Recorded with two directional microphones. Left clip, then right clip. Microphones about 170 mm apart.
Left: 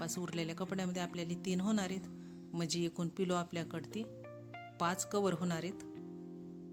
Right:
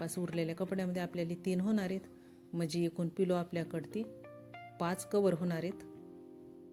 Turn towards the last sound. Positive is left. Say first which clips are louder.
# right 3 dB
turn(degrees=-10)  # may be behind; listen again after turning